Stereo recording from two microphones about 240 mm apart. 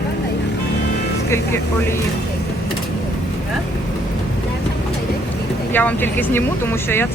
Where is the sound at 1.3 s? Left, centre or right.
Centre.